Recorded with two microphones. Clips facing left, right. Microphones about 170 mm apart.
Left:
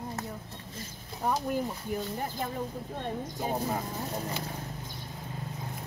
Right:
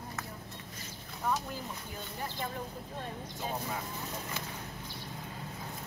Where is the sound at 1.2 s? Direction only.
35° left (ahead or behind).